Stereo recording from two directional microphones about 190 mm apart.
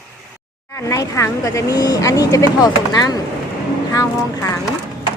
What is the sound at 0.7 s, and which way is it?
Speech, 15° left (ahead or behind).